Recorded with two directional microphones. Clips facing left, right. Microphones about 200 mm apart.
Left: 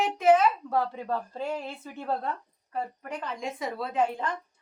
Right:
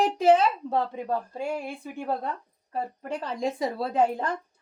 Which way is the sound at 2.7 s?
30° right (ahead or behind).